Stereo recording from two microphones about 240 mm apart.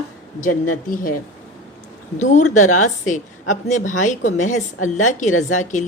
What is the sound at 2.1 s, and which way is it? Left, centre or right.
A woman's voice, left.